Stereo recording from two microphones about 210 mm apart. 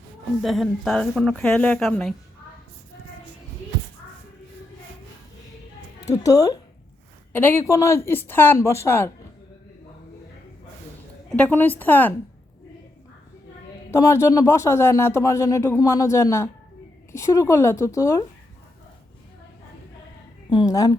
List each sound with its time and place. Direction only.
0.4 s speech: centre (ahead or behind)
6.2 s speech: 15° left (ahead or behind)
11.3 s speech: 5° left (ahead or behind)
14.0 s speech: 15° left (ahead or behind)
20.5 s speech: 20° left (ahead or behind)